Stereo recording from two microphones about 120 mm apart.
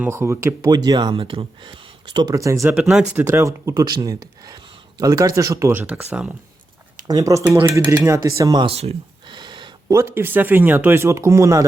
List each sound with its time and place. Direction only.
0.0 s speech: 20° right (ahead or behind)
0.7 s speech: 35° right (ahead or behind)
2.3 s speech: 25° right (ahead or behind)
5.8 s speech: 10° right (ahead or behind)
6.9 s speech: 30° right (ahead or behind)
8.6 s speech: 60° right (ahead or behind)
9.3 s a sound: 40° right (ahead or behind)
9.9 s speech: 25° right (ahead or behind)